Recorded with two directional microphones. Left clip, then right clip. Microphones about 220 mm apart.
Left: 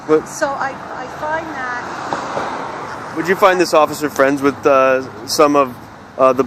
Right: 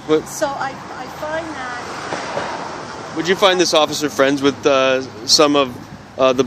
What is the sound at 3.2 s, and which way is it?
A woman's voice, 15° right (ahead or behind).